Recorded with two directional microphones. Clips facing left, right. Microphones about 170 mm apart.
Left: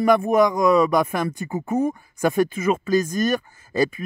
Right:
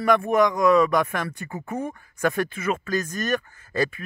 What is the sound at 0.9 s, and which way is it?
Speech, 10° left (ahead or behind).